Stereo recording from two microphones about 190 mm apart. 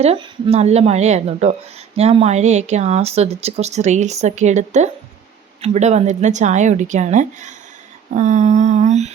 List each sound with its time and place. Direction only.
0.0 s speech: 30° right (ahead or behind)